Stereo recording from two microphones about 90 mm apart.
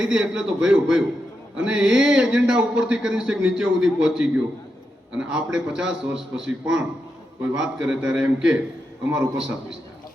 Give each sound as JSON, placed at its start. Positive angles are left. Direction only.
{"t": 0.0, "sound": "a man's voice", "side_deg": -10}